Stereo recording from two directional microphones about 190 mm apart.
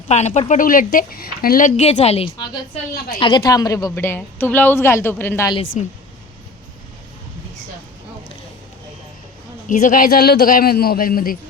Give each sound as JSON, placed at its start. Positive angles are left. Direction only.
{"t": 0.1, "sound": "a woman's voice", "side_deg": 35}
{"t": 5.7, "sound": "a woman's voice", "side_deg": 40}
{"t": 9.6, "sound": "a man's voice", "side_deg": 45}